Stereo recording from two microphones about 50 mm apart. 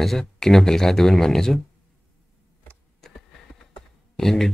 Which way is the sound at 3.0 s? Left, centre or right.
Centre.